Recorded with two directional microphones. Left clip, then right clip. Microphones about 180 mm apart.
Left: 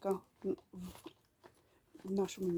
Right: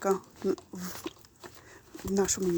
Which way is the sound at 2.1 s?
5° right (ahead or behind).